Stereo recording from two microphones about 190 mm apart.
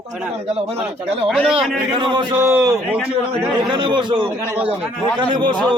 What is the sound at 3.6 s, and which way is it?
Speech, 25° right (ahead or behind).